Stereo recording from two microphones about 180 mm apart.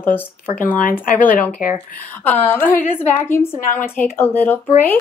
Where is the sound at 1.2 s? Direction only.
50° left (ahead or behind).